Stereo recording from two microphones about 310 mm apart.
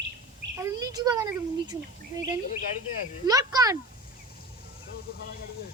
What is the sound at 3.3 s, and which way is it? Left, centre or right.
Speech, centre.